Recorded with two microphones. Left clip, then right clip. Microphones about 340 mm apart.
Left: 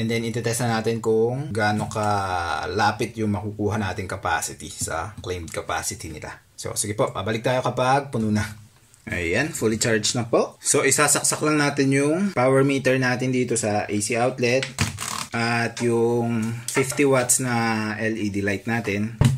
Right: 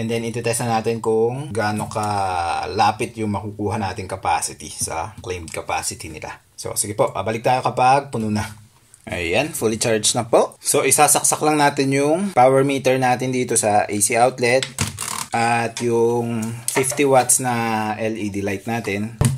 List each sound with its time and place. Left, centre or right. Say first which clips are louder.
0.1 s speech: right 5 dB; centre
10.1 s speech: right 5 dB; right
10.7 s speech: right 3 dB; centre
15.3 s speech: right 6 dB; centre